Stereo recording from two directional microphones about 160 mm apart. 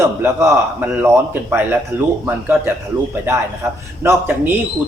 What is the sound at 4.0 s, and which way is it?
Speech, 15° right (ahead or behind).